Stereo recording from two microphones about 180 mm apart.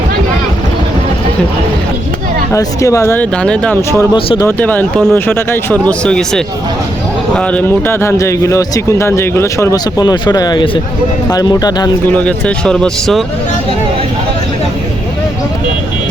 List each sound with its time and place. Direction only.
2.5 s speech: 15° left (ahead or behind)
4.1 s speech: 25° left (ahead or behind)
4.4 s speech: 10° left (ahead or behind)
12.1 s speech: 5° left (ahead or behind)